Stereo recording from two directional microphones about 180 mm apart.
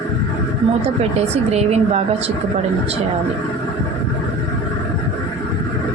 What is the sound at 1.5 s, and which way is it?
Speech, 35° right (ahead or behind).